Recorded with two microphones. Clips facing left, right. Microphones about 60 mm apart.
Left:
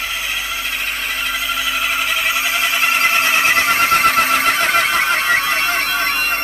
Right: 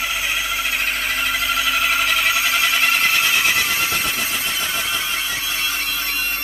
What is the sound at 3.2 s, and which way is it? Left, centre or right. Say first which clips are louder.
Neigh: left 4 dB; left.